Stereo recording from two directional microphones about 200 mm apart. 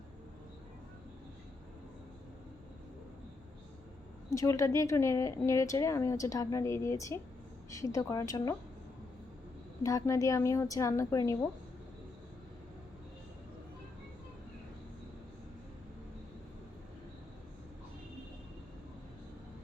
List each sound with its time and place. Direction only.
4.3 s speech: 15° left (ahead or behind)
9.8 s speech: 15° left (ahead or behind)